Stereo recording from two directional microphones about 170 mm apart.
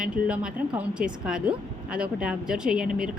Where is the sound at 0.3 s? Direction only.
5° right (ahead or behind).